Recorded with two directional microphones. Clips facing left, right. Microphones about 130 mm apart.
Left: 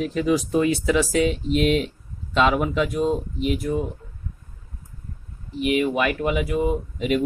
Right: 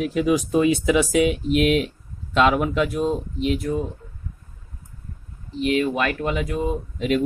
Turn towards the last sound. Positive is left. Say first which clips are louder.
# even
turn(degrees=5)  # may be behind; listen again after turning